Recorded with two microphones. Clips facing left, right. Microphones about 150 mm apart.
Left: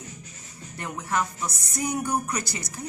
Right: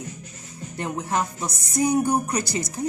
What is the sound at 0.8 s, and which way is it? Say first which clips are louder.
Speech: right 3 dB; 25° right (ahead or behind).